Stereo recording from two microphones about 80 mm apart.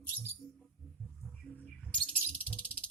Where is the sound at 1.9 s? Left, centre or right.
Centre.